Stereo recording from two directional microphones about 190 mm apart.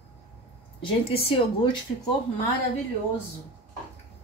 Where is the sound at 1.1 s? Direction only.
30° left (ahead or behind).